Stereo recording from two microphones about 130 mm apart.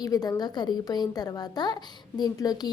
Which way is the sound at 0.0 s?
30° left (ahead or behind).